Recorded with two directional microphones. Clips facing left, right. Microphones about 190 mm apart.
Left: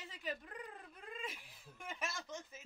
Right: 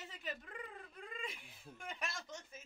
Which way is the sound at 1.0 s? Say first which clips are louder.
Left 1 dB; centre (ahead or behind).